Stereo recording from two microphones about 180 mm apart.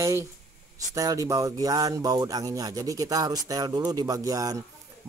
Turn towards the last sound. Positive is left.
turn(degrees=-20)  # may be behind; listen again after turning